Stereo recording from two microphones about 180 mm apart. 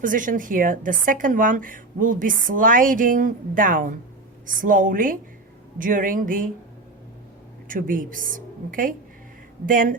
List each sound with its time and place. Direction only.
0.0 s a woman's voice: 45° right (ahead or behind)
7.7 s a woman's voice: 50° right (ahead or behind)